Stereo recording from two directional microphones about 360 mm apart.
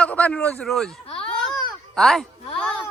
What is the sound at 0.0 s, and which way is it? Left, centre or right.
Speech, centre.